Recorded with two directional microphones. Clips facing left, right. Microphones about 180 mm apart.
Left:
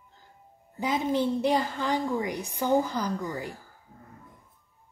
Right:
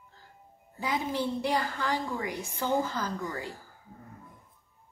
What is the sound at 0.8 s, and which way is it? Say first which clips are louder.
A woman's voice: left 5 dB; 20° left (ahead or behind).